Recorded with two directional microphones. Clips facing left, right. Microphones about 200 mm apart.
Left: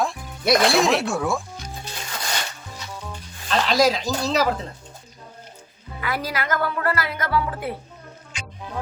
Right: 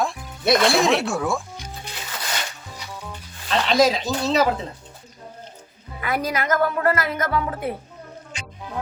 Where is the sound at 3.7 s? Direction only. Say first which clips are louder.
Right 2 dB; centre (ahead or behind).